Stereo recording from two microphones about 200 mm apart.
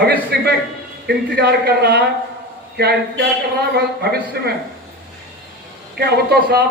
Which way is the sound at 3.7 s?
55° right (ahead or behind).